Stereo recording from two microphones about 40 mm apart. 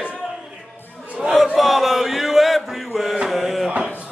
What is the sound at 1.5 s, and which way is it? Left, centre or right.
Chant, centre.